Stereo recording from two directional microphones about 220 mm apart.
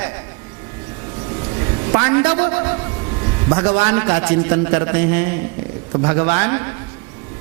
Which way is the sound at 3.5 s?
20° right (ahead or behind).